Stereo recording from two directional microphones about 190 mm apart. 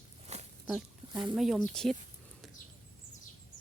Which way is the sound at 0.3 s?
35° right (ahead or behind).